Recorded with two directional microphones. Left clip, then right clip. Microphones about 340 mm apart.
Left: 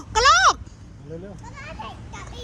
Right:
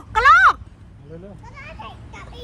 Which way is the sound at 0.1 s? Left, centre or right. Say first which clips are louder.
Right 4 dB; centre.